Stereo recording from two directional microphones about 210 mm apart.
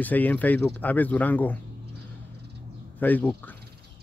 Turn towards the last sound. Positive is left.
turn(degrees=10)  # may be behind; listen again after turning